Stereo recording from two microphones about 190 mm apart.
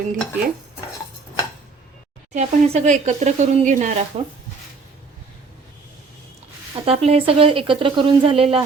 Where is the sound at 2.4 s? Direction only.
35° right (ahead or behind).